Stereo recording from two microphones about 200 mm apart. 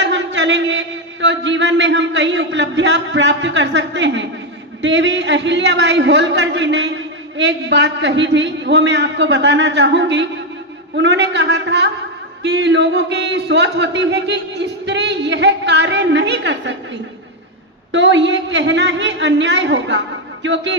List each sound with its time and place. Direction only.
0.0 s a sound: 65° right (ahead or behind)
4.8 s a man's voice: 65° right (ahead or behind)
17.9 s a man's voice: 65° right (ahead or behind)